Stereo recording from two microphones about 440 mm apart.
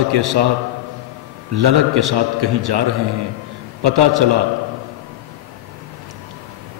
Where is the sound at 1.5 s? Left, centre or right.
Right.